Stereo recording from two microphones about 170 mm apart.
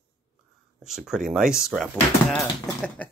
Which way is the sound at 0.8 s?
5° right (ahead or behind).